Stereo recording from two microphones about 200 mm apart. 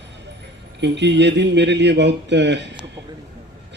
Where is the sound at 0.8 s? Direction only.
60° right (ahead or behind).